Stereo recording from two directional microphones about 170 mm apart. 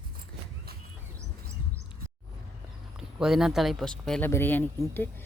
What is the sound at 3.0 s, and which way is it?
Speech, 5° right (ahead or behind).